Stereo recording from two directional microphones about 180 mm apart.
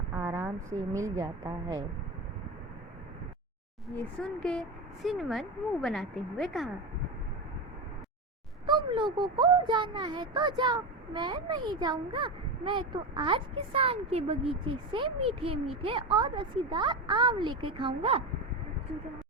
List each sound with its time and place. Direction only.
0.1 s a woman's voice: 15° right (ahead or behind)
3.8 s speech: 5° left (ahead or behind)
8.6 s speech: 25° right (ahead or behind)